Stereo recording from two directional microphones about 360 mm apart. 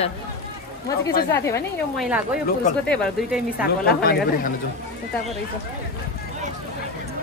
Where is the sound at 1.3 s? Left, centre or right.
Centre.